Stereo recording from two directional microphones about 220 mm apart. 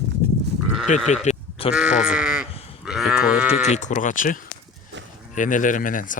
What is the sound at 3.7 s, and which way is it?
Speech, 35° left (ahead or behind).